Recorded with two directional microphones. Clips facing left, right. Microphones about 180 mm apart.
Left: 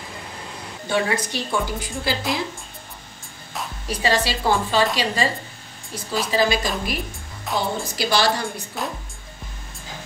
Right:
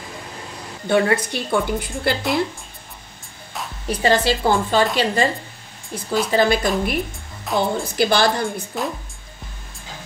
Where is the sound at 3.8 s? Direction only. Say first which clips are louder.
Right 4 dB; 55° right (ahead or behind).